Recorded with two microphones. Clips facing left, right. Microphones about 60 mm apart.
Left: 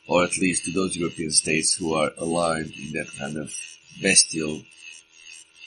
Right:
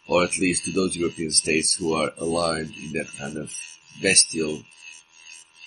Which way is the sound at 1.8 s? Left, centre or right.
Right.